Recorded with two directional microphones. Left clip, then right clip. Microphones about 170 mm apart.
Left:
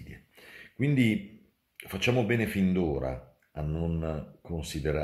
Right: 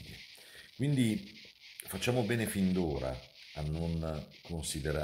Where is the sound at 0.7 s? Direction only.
15° right (ahead or behind).